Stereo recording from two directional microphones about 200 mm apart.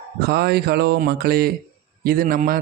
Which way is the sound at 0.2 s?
50° right (ahead or behind).